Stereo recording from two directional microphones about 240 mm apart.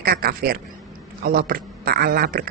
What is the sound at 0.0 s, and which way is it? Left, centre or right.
A woman's voice, right.